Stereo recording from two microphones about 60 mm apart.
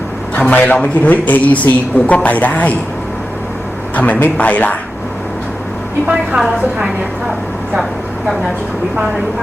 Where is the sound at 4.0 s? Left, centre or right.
Left.